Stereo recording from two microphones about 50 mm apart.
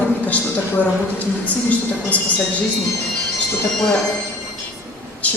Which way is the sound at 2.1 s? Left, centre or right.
Left.